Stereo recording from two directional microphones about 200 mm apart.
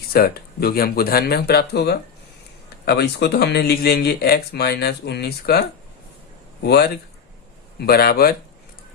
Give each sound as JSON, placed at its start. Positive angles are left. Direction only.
{"t": 0.1, "sound": "speech", "side_deg": 50}